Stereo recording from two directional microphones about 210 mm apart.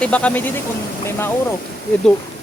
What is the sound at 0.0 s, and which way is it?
Speech, 5° left (ahead or behind).